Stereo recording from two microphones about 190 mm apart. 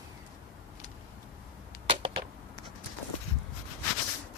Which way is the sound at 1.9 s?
30° right (ahead or behind).